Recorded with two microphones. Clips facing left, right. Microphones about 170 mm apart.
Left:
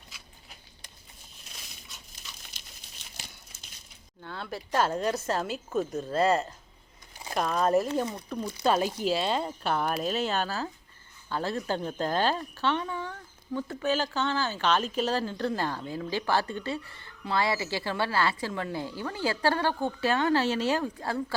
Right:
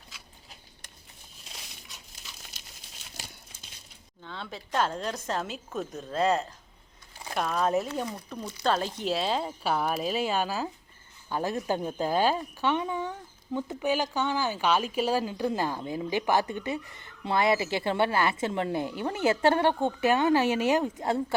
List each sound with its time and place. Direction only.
4.2 s a woman's voice: 5° left (ahead or behind); by 21.3 s 20° right (ahead or behind)